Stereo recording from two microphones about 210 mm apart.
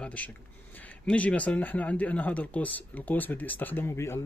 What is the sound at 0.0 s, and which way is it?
Speech, 5° left (ahead or behind).